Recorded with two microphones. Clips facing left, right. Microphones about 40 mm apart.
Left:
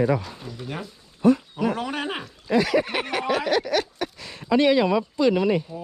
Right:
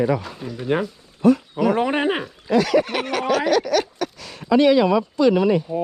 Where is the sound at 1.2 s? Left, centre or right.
Right.